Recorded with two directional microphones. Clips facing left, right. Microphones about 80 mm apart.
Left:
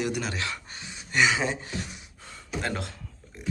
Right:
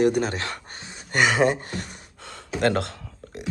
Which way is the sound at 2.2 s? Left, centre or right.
Right.